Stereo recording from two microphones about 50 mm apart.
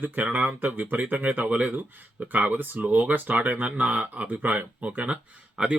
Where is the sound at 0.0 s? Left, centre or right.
Right.